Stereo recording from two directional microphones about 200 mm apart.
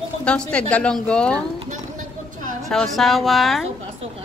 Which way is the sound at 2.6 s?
Centre (ahead or behind).